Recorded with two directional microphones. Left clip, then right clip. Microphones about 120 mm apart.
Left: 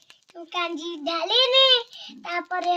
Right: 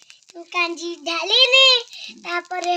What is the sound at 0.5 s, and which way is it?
A child's voice, 60° right (ahead or behind).